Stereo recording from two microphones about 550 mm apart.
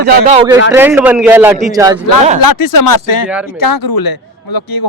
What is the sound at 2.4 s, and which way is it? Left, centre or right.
A man's voice, left.